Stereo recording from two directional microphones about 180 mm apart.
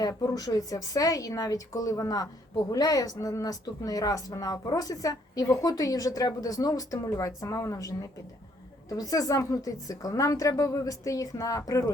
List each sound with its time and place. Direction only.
0.2 s speech: 20° left (ahead or behind)